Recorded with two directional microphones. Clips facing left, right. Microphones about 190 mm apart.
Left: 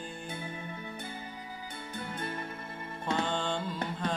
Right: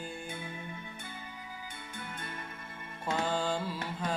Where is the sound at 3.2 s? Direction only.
5° right (ahead or behind).